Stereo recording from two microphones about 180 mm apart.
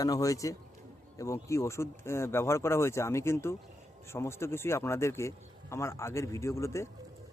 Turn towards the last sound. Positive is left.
turn(degrees=15)  # may be behind; listen again after turning